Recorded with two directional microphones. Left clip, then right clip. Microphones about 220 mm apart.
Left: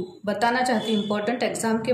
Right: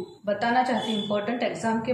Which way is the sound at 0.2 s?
50° left (ahead or behind).